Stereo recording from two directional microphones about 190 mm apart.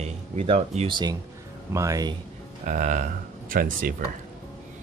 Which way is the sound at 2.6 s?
45° right (ahead or behind).